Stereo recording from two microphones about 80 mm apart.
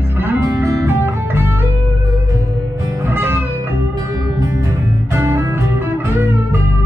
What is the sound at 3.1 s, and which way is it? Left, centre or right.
Music, right.